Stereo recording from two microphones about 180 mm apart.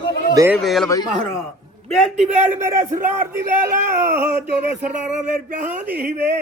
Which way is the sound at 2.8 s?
50° right (ahead or behind).